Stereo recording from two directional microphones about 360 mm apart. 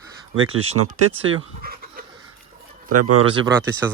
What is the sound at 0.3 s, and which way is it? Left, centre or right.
Speech, right.